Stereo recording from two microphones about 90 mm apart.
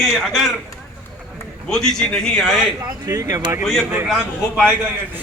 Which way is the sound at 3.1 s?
40° right (ahead or behind).